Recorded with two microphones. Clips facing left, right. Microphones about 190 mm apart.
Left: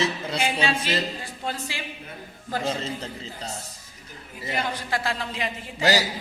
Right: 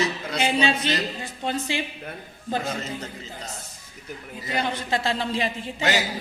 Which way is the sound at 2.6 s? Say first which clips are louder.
Left 2 dB; 30° left (ahead or behind).